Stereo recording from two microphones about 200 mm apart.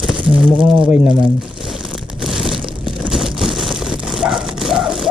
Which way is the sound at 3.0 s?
Centre (ahead or behind).